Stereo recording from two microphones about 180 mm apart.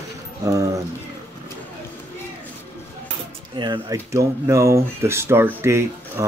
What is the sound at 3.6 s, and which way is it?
Speech, 20° right (ahead or behind).